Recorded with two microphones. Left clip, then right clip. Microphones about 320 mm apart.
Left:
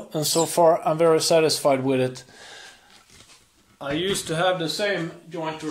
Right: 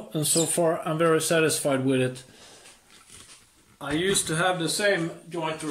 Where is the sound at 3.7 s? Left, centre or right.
Centre.